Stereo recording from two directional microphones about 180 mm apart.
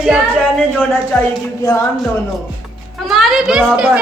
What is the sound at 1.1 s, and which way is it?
Speech, 10° left (ahead or behind).